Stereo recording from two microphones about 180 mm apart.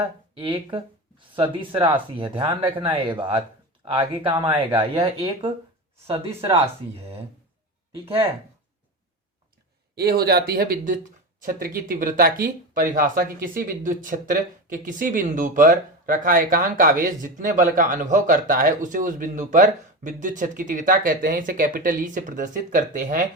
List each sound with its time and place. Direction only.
0.3 s speech: 30° right (ahead or behind)
6.1 s speech: 30° right (ahead or behind)
9.9 s speech: 60° right (ahead or behind)